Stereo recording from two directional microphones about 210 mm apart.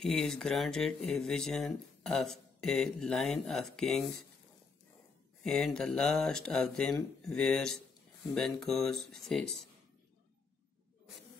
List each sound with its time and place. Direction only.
0.0 s speech: centre (ahead or behind)
5.4 s speech: 5° left (ahead or behind)